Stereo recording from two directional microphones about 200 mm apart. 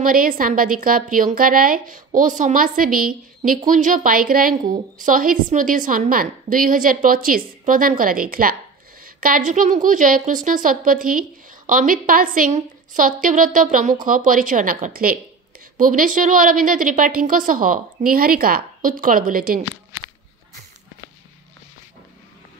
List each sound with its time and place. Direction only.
0.0 s a woman's voice: 45° right (ahead or behind)